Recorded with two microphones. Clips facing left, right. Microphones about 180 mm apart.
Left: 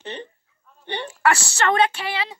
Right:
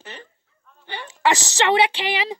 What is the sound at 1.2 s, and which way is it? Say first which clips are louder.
Speech: right 1 dB; 15° right (ahead or behind).